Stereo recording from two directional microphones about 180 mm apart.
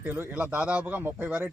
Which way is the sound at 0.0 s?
10° right (ahead or behind).